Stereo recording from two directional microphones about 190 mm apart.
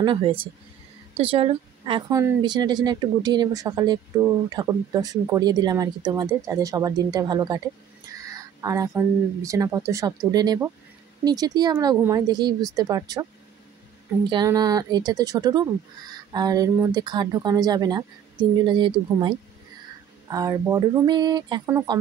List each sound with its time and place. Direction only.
0.0 s a woman's voice: 25° right (ahead or behind)
14.3 s a woman's voice: 20° right (ahead or behind)